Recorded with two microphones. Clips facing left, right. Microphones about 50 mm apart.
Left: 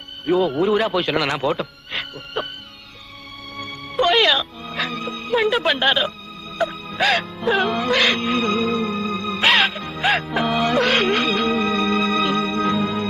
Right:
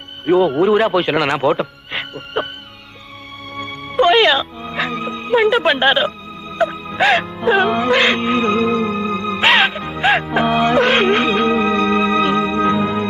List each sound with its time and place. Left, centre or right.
0.2 s a man's voice: centre
3.5 s music: centre
4.2 s music: centre
10.6 s music: centre